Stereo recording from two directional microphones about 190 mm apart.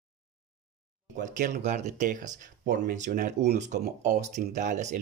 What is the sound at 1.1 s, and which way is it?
Speech, 40° right (ahead or behind).